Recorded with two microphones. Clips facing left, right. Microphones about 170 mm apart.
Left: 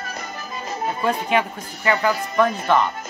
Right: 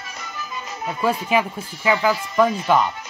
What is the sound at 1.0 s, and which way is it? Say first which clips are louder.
Speech: right 2 dB; 5° right (ahead or behind).